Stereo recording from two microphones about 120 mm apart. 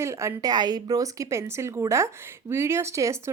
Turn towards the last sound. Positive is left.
turn(degrees=-25)  # may be behind; listen again after turning